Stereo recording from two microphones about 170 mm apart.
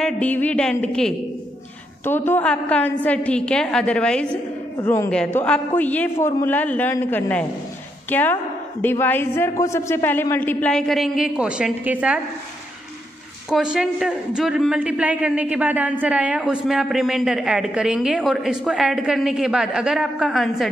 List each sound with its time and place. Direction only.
0.0 s a woman's voice: 10° left (ahead or behind)
4.7 s a man's voice: 15° left (ahead or behind); by 12.2 s 10° right (ahead or behind)
13.5 s a man's voice: 5° right (ahead or behind)